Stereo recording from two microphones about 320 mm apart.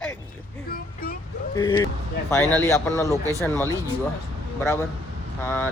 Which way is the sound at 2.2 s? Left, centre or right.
Centre.